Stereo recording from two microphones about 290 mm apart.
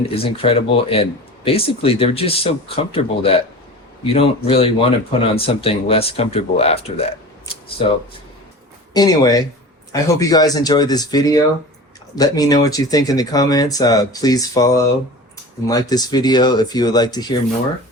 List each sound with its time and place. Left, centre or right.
0.0 s speech: centre